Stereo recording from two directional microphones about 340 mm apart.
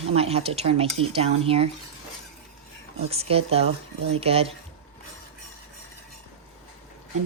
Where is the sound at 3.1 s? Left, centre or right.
Centre.